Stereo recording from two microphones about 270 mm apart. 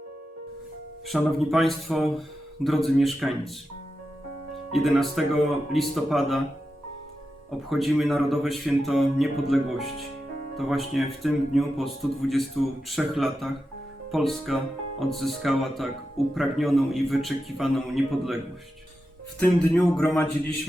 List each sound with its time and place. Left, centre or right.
1.0 s speech: centre
4.7 s speech: centre
7.7 s speech: centre
19.4 s speech: centre